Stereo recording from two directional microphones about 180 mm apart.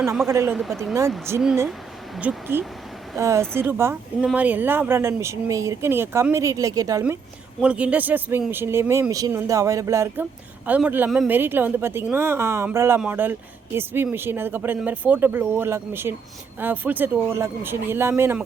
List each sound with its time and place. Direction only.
0.0 s speech: centre (ahead or behind)
0.3 s speech: 15° right (ahead or behind)
0.5 s speech: centre (ahead or behind)
1.3 s speech: 15° right (ahead or behind)
7.6 s speech: 5° right (ahead or behind)